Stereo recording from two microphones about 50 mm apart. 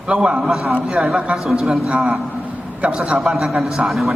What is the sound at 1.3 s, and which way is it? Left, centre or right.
Speech, centre.